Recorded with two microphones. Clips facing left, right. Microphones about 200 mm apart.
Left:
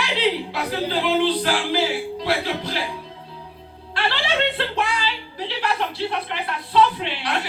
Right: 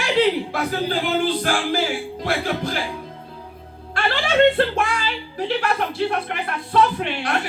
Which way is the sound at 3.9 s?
50° right (ahead or behind).